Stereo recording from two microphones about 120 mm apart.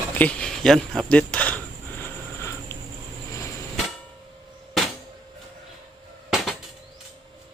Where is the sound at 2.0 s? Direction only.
20° left (ahead or behind).